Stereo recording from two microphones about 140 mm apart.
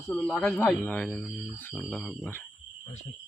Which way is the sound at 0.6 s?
10° left (ahead or behind).